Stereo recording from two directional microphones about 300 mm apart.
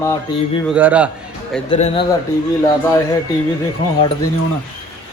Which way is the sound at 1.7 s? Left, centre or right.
Centre.